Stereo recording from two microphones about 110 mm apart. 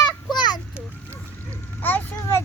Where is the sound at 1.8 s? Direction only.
15° left (ahead or behind).